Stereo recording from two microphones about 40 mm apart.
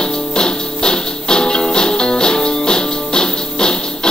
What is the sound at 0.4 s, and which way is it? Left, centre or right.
Music, left.